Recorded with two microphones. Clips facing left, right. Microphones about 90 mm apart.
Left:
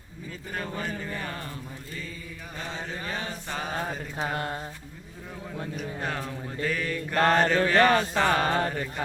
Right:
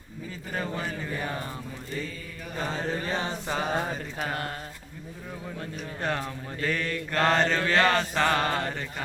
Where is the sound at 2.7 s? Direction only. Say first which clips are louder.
Right 4 dB; 35° right (ahead or behind).